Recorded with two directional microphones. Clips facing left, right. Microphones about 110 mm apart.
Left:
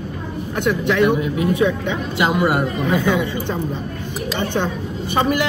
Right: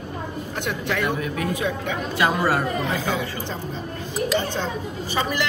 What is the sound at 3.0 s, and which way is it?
Speech, 60° left (ahead or behind).